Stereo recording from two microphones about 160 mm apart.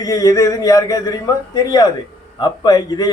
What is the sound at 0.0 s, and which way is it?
A man's voice, 20° left (ahead or behind).